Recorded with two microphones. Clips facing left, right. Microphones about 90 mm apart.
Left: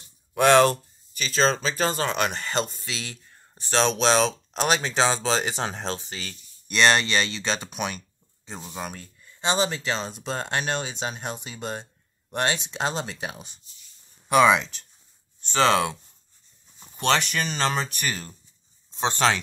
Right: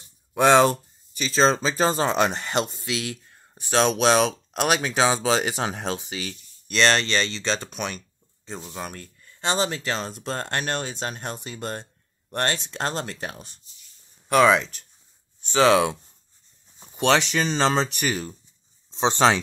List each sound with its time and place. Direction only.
0.3 s speech: 15° right (ahead or behind)
6.7 s speech: 10° left (ahead or behind); by 19.4 s 20° right (ahead or behind)